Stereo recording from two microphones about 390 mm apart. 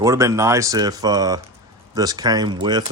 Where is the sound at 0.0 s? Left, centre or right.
Centre.